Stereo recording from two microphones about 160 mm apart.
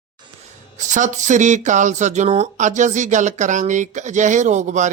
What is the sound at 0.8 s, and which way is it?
Speech, 50° right (ahead or behind).